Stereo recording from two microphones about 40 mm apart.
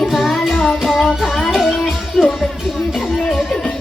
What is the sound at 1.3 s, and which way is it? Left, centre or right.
Music, centre.